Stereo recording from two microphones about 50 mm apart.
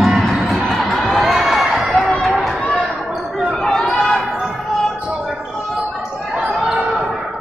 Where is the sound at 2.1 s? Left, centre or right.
Centre.